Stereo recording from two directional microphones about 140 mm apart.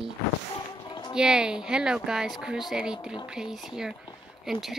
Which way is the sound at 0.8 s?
30° left (ahead or behind).